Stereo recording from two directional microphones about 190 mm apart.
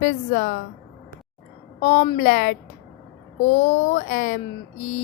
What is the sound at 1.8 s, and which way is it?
A woman's voice, 40° left (ahead or behind).